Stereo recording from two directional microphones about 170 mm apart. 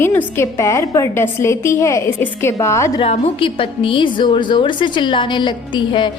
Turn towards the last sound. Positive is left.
turn(degrees=30)  # may be behind; listen again after turning